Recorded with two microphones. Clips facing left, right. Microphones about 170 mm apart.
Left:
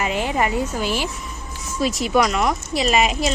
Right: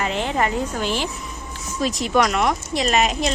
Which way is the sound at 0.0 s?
10° left (ahead or behind).